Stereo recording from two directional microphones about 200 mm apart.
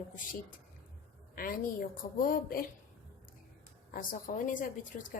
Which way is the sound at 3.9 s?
40° left (ahead or behind).